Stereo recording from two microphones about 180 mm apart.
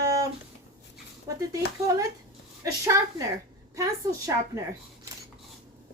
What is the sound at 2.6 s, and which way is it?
Speech, 15° right (ahead or behind).